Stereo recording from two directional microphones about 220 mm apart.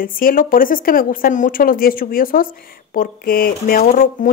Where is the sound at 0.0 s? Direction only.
40° left (ahead or behind).